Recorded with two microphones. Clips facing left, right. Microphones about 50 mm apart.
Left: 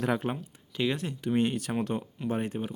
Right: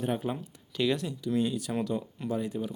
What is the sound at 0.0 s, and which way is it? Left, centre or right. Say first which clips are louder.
Speech: left 2 dB; left.